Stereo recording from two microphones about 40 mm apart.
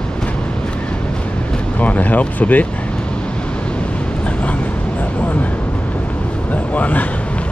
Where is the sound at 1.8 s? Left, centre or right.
Left.